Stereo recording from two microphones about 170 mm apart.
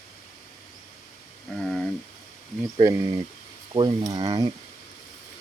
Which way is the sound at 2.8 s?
20° right (ahead or behind).